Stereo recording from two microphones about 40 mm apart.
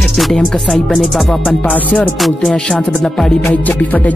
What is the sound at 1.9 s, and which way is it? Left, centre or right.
Speech, left.